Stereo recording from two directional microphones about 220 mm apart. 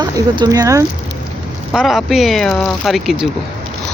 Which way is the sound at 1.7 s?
Centre (ahead or behind).